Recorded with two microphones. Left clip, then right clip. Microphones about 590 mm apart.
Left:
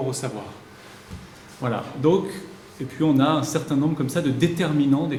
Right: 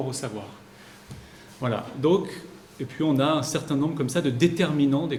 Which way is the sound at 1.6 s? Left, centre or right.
Right.